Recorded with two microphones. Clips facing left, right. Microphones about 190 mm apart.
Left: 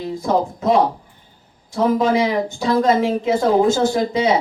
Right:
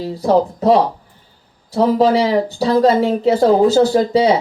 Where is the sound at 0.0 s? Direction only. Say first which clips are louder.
Right 4 dB; 35° right (ahead or behind).